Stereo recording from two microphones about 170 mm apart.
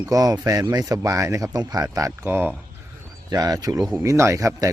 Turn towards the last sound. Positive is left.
turn(degrees=-20)  # may be behind; listen again after turning